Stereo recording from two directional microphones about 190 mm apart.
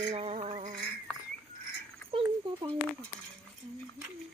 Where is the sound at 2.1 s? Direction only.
30° right (ahead or behind).